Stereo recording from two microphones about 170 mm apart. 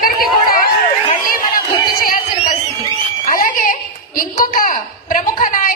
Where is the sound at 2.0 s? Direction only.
55° left (ahead or behind).